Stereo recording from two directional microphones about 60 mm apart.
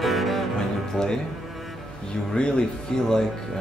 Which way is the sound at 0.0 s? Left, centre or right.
Centre.